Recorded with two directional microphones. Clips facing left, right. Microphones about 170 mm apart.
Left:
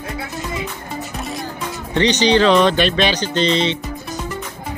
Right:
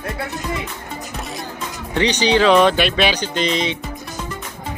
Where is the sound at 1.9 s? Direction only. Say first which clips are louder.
Left 2 dB; 10° right (ahead or behind).